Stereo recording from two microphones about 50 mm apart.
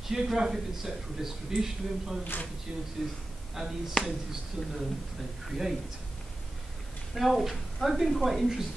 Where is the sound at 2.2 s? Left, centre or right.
Left.